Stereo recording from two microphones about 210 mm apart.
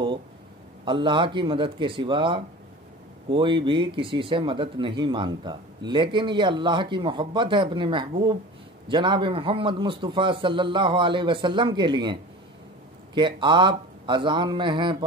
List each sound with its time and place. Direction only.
0.8 s speech: 20° right (ahead or behind)